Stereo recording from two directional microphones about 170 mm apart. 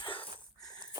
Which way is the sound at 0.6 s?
25° left (ahead or behind).